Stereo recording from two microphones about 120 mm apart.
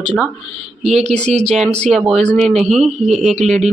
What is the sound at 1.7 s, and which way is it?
Speech, 5° left (ahead or behind).